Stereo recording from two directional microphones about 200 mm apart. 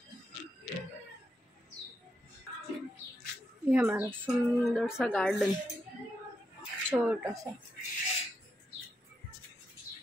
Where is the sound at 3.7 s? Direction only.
10° right (ahead or behind).